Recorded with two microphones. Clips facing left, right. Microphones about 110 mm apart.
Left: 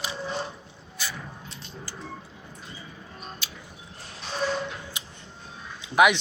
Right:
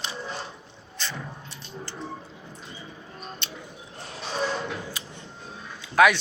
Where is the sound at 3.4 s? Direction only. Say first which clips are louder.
Right 2 dB; 5° left (ahead or behind).